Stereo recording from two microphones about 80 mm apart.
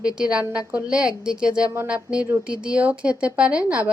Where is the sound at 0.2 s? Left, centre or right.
Centre.